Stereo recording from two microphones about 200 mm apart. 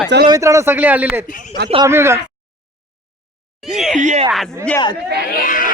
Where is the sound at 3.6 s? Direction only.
Centre (ahead or behind).